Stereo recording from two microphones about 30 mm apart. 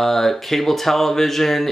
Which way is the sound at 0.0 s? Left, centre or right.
Centre.